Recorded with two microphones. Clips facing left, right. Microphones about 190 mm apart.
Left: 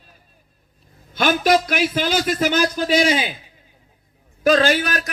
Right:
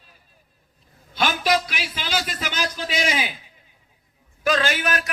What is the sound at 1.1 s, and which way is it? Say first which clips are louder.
A man's voice: left 5 dB; 50° left (ahead or behind).